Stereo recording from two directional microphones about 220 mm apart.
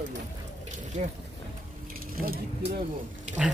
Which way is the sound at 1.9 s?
40° right (ahead or behind).